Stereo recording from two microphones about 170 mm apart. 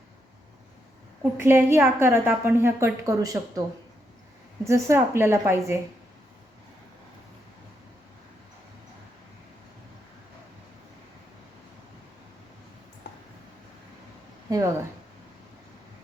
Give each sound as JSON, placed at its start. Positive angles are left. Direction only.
{"t": 1.2, "sound": "a woman's voice", "side_deg": -15}
{"t": 4.6, "sound": "a woman's voice", "side_deg": -15}
{"t": 14.5, "sound": "a sound", "side_deg": -20}